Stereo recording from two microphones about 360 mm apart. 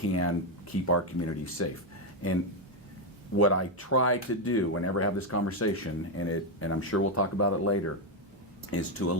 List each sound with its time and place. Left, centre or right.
0.1 s speech: left
3.3 s speech: left